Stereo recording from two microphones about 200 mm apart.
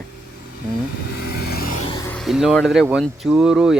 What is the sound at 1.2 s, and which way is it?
Vehicle, 50° left (ahead or behind).